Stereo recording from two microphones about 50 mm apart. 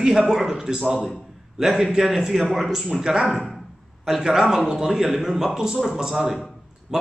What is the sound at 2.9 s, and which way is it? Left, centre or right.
A man's voice, centre.